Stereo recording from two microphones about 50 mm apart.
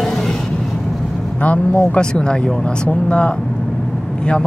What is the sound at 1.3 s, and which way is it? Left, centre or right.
Speech, left.